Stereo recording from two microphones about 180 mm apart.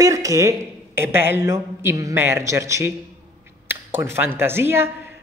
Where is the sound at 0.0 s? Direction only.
20° right (ahead or behind).